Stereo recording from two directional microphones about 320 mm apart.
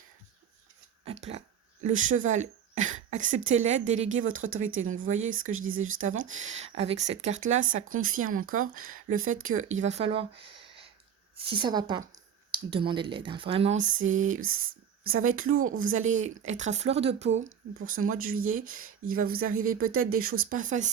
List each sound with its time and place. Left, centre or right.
1.0 s speech: centre
4.3 s speech: right
4.8 s speech: right
19.8 s speech: right
20.2 s speech: right